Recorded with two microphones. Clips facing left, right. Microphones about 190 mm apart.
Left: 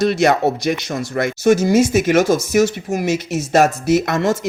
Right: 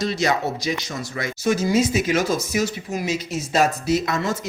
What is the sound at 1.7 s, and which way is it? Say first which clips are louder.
Speech: left 5 dB; 45° left (ahead or behind).